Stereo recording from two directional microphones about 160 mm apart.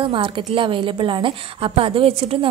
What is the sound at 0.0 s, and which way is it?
A woman's voice, 35° right (ahead or behind).